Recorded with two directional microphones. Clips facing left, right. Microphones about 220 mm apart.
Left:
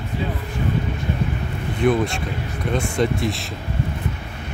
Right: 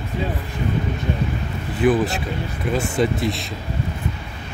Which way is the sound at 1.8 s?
5° right (ahead or behind).